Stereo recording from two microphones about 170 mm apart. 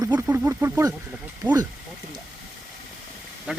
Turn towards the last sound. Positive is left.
turn(degrees=-5)  # may be behind; listen again after turning